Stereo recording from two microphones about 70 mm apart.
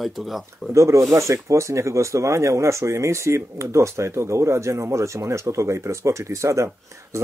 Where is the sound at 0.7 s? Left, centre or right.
Right.